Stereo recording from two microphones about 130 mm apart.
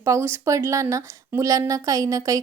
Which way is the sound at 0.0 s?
20° right (ahead or behind).